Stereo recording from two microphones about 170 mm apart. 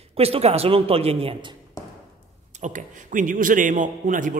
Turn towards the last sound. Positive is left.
turn(degrees=-50)  # may be behind; listen again after turning